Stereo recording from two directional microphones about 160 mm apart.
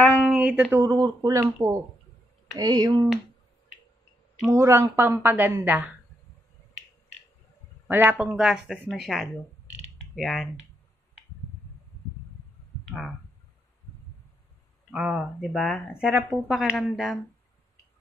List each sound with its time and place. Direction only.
0.3 s speech: 5° right (ahead or behind)
0.9 s speech: 25° right (ahead or behind)
4.5 s a woman's voice: 15° right (ahead or behind)
7.9 s a woman's voice: 10° right (ahead or behind)
12.8 s clicking: centre (ahead or behind)
14.9 s speech: 5° right (ahead or behind)